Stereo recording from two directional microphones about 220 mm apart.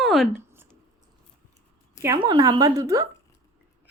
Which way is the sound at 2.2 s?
20° right (ahead or behind).